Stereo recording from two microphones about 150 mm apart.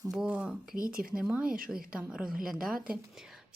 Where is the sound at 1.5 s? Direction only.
70° right (ahead or behind).